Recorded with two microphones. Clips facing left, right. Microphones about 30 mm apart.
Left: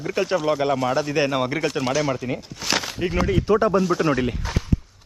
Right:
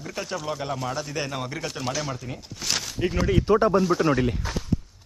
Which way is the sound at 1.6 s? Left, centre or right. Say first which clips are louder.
Left 7 dB; centre.